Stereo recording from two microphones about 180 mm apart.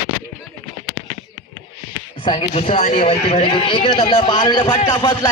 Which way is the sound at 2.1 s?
25° left (ahead or behind).